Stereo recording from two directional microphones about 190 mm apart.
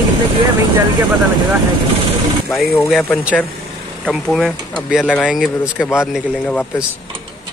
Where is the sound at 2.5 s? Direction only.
Centre (ahead or behind).